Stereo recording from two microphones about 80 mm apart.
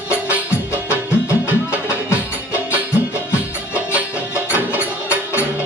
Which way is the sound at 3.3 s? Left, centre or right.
Centre.